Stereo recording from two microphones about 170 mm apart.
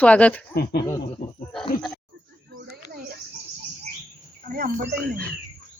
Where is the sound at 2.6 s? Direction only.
65° right (ahead or behind).